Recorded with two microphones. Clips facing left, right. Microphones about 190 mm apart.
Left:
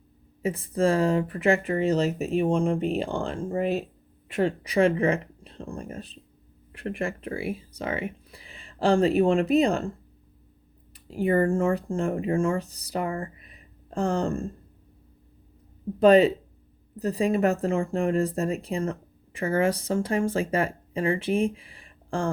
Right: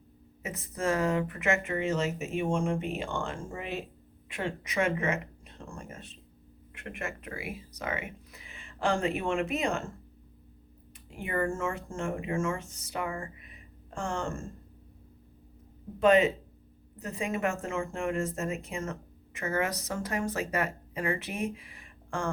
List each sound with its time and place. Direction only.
0.4 s speech: 30° left (ahead or behind)
11.1 s speech: 35° left (ahead or behind)
16.0 s speech: 35° left (ahead or behind)